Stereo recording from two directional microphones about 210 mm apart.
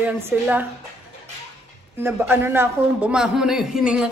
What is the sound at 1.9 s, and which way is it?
Speech, 10° right (ahead or behind).